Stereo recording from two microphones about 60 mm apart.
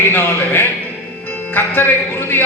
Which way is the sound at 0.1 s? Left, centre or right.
Left.